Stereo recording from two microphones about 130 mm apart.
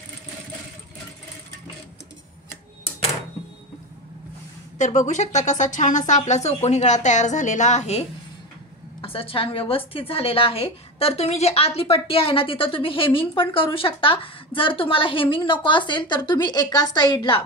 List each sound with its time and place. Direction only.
4.7 s speech: 70° left (ahead or behind)
9.0 s a woman's voice: 45° left (ahead or behind)